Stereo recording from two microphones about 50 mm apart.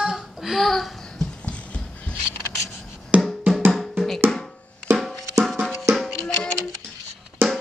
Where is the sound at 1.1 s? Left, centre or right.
Centre.